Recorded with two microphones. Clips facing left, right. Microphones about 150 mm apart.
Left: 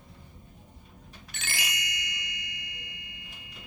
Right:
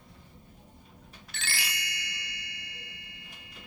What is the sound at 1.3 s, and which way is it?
Ding, 15° left (ahead or behind).